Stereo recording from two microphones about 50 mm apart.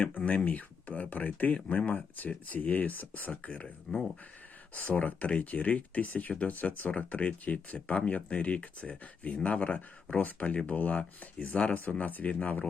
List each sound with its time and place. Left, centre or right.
0.3 s speech: left